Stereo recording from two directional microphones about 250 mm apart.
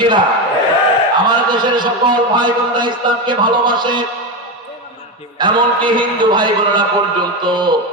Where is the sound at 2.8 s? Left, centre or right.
Centre.